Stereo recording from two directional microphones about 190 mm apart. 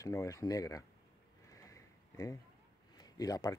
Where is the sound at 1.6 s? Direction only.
15° left (ahead or behind).